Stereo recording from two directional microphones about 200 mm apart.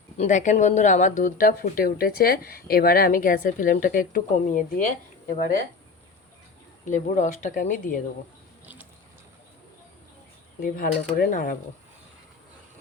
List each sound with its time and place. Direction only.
0.2 s speech: 40° left (ahead or behind)
6.9 s speech: 40° left (ahead or behind)
8.6 s mechanisms: 10° right (ahead or behind)
10.6 s speech: 45° left (ahead or behind)